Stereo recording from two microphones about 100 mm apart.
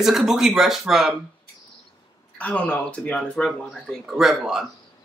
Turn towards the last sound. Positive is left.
turn(degrees=-5)  # may be behind; listen again after turning